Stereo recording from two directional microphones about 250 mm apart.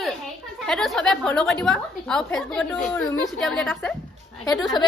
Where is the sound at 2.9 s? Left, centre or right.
Centre.